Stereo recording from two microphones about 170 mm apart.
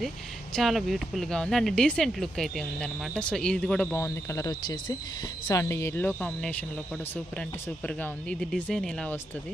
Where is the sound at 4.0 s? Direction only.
15° left (ahead or behind).